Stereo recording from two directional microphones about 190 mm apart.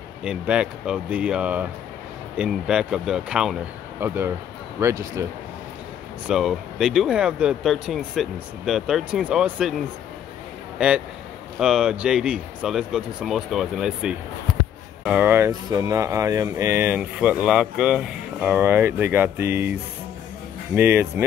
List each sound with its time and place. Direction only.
0.2 s speech: 5° right (ahead or behind)
6.2 s speech: centre (ahead or behind)
11.6 s speech: 5° right (ahead or behind)